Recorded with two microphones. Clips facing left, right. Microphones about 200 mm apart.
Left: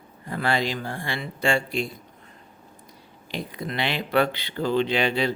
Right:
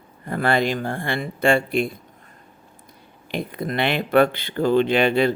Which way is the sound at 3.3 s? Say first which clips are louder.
Right 5 dB; 55° right (ahead or behind).